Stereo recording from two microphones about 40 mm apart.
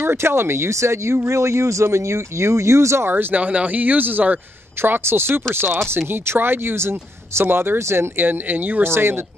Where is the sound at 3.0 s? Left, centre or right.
Right.